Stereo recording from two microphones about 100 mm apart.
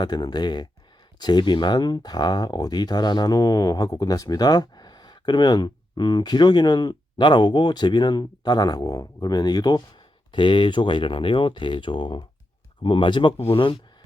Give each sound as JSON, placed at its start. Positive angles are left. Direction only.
{"t": 0.0, "sound": "speech", "side_deg": 45}